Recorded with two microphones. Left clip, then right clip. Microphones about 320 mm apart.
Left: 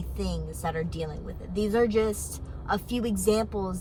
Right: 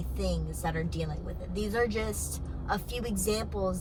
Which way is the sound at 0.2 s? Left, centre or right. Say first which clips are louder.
Even; centre.